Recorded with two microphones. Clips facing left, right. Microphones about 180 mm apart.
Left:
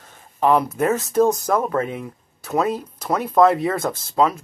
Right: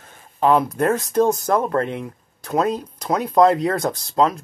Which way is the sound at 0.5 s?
5° left (ahead or behind).